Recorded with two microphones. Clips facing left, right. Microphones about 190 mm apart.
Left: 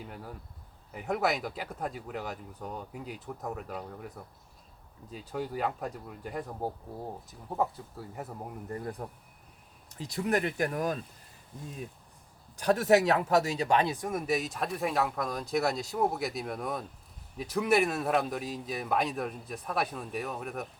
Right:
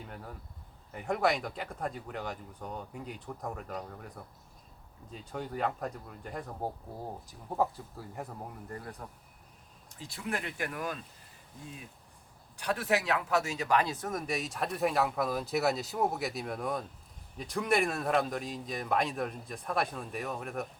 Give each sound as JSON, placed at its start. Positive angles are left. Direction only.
{"t": 0.1, "sound": "speech", "side_deg": 5}
{"t": 5.1, "sound": "speech", "side_deg": 5}
{"t": 8.8, "sound": "speech", "side_deg": 30}
{"t": 10.1, "sound": "speech", "side_deg": 40}
{"t": 12.5, "sound": "speech", "side_deg": 40}